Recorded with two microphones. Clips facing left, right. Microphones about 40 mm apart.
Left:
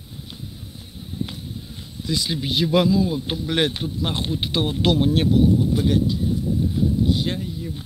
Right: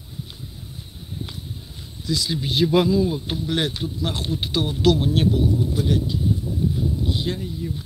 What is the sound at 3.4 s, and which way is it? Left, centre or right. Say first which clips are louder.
Speech: left 2 dB; left.